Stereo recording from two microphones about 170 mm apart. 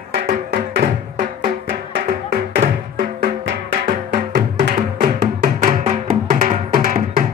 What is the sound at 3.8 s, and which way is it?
Music, 55° right (ahead or behind).